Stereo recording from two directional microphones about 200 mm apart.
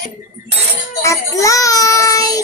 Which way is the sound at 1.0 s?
15° left (ahead or behind).